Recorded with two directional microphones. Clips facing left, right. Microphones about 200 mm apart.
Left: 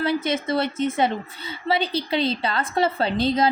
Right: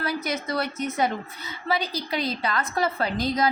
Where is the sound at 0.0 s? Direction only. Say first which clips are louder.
Left 5 dB; 25° left (ahead or behind).